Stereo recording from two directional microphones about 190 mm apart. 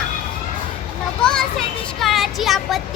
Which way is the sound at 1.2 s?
5° left (ahead or behind).